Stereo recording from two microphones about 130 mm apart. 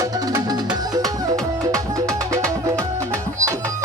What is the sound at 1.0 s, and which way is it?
Music, 5° left (ahead or behind).